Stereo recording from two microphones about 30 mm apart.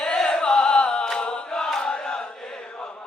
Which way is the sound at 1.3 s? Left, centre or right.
Left.